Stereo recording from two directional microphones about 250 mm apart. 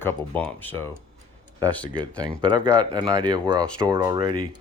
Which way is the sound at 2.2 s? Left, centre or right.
Centre.